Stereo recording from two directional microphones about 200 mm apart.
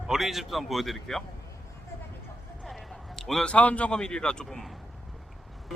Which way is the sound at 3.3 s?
5° left (ahead or behind).